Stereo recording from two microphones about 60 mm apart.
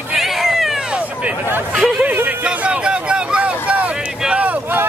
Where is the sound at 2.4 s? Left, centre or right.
Centre.